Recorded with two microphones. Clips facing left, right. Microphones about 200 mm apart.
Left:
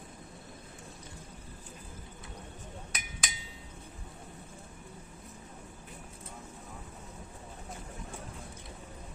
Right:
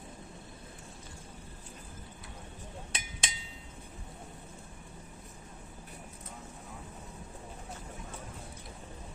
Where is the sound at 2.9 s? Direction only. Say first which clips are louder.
Right 2 dB; 25° right (ahead or behind).